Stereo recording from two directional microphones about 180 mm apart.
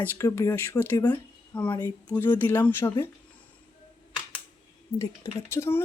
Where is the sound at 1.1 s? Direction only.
10° left (ahead or behind).